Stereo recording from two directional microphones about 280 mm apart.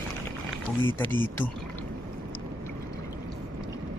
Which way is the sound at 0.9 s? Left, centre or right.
Centre.